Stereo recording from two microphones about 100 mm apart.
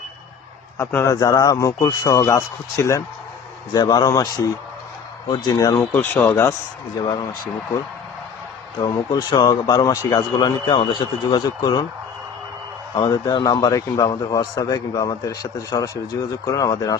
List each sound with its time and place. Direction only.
0.9 s speech: 20° left (ahead or behind)
1.1 s a man's voice: 35° left (ahead or behind)
3.7 s a man's voice: 45° left (ahead or behind)
5.3 s a man's voice: 40° left (ahead or behind)
5.7 s speech: 20° left (ahead or behind)
7.0 s a man's voice: 50° left (ahead or behind)
8.8 s a man's voice: 40° left (ahead or behind)
12.9 s a man's voice: 45° left (ahead or behind)
14.1 s a man's voice: 45° left (ahead or behind)